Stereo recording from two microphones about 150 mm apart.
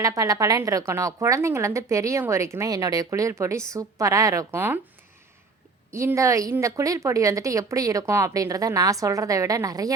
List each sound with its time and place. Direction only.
0.0 s speech: 20° right (ahead or behind)
5.9 s speech: 20° right (ahead or behind)